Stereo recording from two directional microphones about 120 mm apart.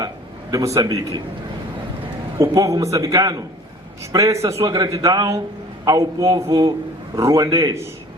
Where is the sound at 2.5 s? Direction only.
30° right (ahead or behind).